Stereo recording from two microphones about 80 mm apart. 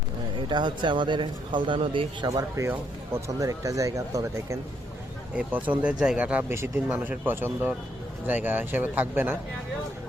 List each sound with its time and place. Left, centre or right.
0.4 s speech: right
2.2 s speech: right
2.6 s speech: right
3.3 s speech: right
5.3 s speech: centre